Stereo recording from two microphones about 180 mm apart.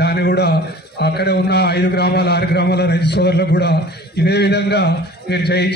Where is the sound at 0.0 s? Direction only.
65° left (ahead or behind).